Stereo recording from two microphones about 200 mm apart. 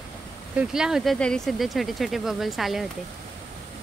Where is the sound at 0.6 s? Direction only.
5° right (ahead or behind).